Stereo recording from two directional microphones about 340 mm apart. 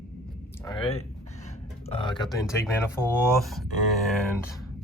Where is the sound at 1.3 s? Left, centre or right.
Centre.